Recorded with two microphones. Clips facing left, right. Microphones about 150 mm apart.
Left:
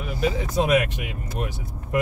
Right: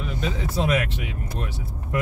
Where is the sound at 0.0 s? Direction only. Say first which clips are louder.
Left 3 dB; 10° left (ahead or behind).